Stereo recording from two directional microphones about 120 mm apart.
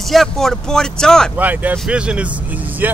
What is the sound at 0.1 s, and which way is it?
Speech, 5° left (ahead or behind).